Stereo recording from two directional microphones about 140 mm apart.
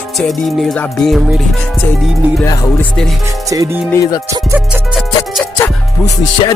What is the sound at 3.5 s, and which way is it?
Speech, 25° right (ahead or behind).